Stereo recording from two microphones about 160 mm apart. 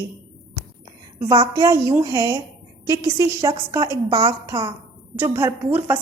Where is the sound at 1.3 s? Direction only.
25° right (ahead or behind).